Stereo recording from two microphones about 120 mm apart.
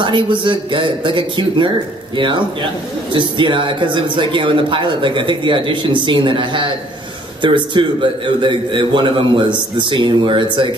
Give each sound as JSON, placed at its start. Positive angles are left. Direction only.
{"t": 0.0, "sound": "a man's voice", "side_deg": -40}